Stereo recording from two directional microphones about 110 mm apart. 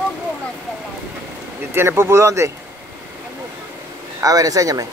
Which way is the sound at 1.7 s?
20° right (ahead or behind).